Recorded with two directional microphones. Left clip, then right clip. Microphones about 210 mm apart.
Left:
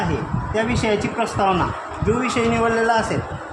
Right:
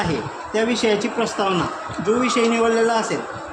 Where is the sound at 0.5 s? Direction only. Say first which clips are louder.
Right 1 dB; 10° left (ahead or behind).